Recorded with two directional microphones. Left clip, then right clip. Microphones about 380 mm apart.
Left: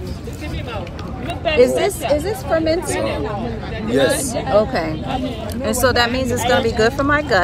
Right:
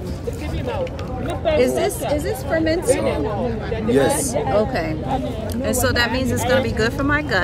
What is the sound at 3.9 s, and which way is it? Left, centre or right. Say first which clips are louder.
Speech: left 1 dB; centre.